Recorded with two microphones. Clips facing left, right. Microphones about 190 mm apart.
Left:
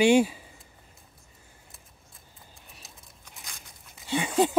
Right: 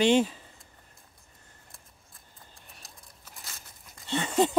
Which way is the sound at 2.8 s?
Centre (ahead or behind).